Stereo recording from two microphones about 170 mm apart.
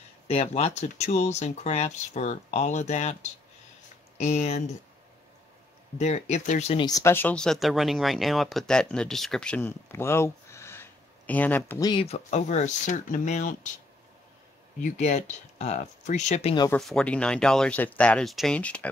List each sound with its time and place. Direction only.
0.3 s speech: 40° left (ahead or behind)
5.9 s speech: 40° left (ahead or behind)
6.8 s speech: 20° left (ahead or behind)
11.9 s speech: 35° left (ahead or behind)
14.8 s speech: 45° left (ahead or behind)
16.7 s speech: 5° left (ahead or behind)